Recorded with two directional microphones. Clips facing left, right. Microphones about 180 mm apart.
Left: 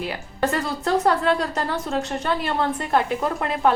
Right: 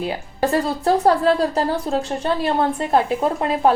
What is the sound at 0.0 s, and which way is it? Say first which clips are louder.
Speech: right 3 dB; 30° right (ahead or behind).